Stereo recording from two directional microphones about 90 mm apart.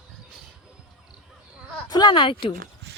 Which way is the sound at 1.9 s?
55° left (ahead or behind).